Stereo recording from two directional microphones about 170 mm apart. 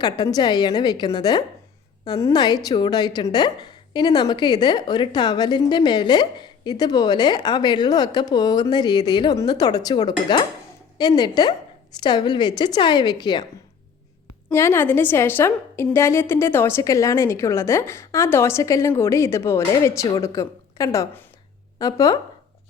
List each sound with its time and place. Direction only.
0.0 s a woman's voice: 25° left (ahead or behind)
14.5 s a woman's voice: 15° left (ahead or behind)